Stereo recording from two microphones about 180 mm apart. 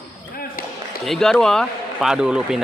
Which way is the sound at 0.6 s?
55° left (ahead or behind).